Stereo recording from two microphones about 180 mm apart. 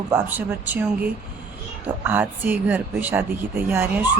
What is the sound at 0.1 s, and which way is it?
Speech, 10° right (ahead or behind).